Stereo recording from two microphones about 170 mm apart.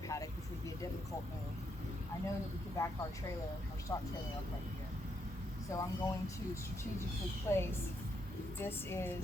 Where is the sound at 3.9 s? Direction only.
15° left (ahead or behind).